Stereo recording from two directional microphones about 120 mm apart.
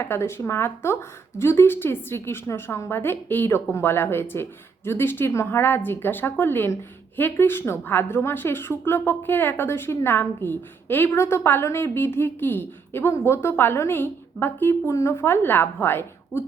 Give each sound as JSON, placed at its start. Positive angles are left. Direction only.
{"t": 0.0, "sound": "a woman's voice", "side_deg": 20}